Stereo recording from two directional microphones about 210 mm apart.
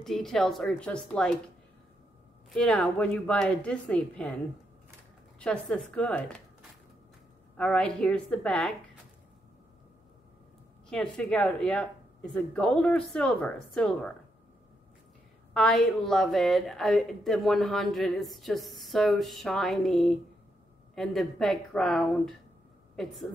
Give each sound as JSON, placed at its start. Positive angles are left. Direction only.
{"t": 0.0, "sound": "a woman's voice", "side_deg": 0}
{"t": 2.5, "sound": "a woman's voice", "side_deg": 5}
{"t": 5.4, "sound": "a woman's voice", "side_deg": 5}
{"t": 7.5, "sound": "a woman's voice", "side_deg": 5}
{"t": 10.9, "sound": "a woman's voice", "side_deg": 5}
{"t": 15.5, "sound": "a woman's voice", "side_deg": 5}